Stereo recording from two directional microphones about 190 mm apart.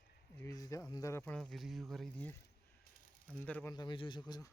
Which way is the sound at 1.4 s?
Centre (ahead or behind).